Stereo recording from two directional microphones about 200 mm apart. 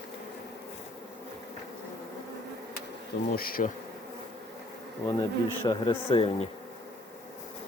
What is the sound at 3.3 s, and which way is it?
Bee, 45° left (ahead or behind).